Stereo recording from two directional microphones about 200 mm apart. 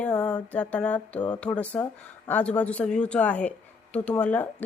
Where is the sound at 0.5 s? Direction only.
5° left (ahead or behind).